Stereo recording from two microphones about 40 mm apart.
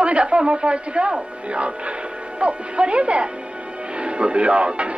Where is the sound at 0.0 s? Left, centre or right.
Right.